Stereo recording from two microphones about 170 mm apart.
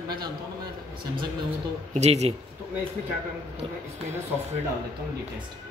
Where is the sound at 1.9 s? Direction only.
40° right (ahead or behind).